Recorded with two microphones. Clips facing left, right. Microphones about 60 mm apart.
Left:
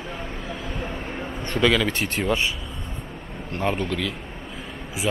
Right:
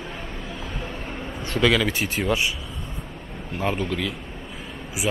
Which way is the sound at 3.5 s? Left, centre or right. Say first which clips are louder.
Left 1 dB; centre.